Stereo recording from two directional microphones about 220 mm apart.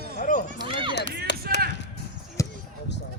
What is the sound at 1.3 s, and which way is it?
Chop, 50° left (ahead or behind).